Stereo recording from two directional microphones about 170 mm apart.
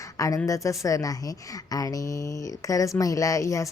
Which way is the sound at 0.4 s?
20° left (ahead or behind).